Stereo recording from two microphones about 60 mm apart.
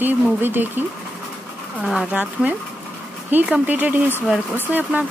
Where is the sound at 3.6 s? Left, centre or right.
Right.